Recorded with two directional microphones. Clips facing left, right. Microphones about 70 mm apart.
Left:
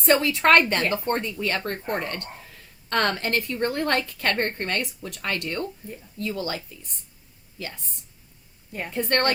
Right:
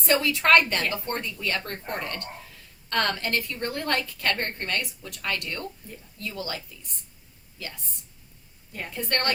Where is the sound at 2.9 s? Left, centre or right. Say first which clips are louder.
Left 2 dB; left.